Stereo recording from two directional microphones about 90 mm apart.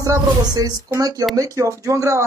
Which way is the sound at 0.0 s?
40° right (ahead or behind).